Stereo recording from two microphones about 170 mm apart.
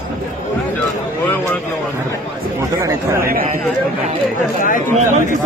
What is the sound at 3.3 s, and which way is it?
Speech, 55° right (ahead or behind).